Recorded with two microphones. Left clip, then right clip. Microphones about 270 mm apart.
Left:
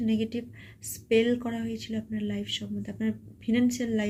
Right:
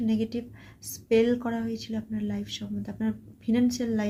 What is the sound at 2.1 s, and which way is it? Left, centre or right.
Speech, right.